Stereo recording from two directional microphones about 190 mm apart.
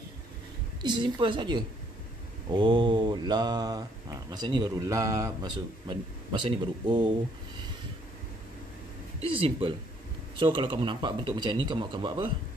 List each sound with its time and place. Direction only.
0.8 s speech: 25° right (ahead or behind)
9.2 s speech: 30° right (ahead or behind)